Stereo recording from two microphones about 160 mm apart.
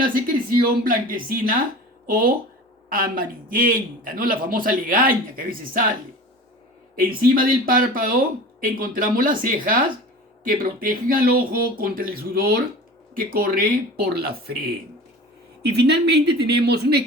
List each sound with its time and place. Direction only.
0.0 s a man's voice: 60° right (ahead or behind)
7.3 s a man's voice: 65° right (ahead or behind)
15.6 s speech: 90° right